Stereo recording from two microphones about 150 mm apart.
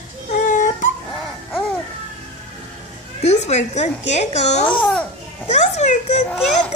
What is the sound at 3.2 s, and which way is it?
A child's voice, 50° left (ahead or behind).